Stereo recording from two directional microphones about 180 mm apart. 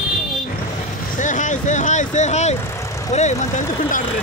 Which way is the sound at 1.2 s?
45° left (ahead or behind).